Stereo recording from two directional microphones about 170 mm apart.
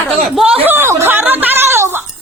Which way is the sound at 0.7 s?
15° right (ahead or behind).